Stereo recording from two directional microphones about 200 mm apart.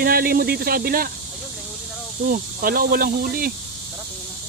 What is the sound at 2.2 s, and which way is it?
Speech, 45° right (ahead or behind).